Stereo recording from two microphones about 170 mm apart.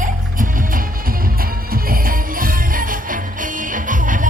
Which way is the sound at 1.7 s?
60° right (ahead or behind).